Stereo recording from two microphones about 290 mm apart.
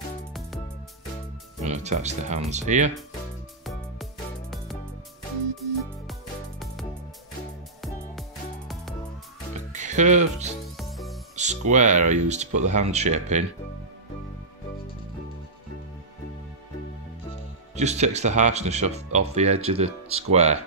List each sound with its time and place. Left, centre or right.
1.6 s speech: right
3.6 s music: centre
7.8 s music: centre
9.7 s music: right
10.8 s music: centre
11.3 s speech: right
17.7 s speech: right